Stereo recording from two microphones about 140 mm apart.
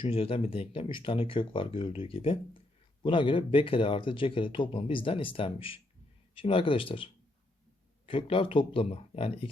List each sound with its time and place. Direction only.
0.0 s speech: 40° left (ahead or behind)